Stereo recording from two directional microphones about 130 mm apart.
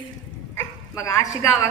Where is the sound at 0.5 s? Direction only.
25° left (ahead or behind).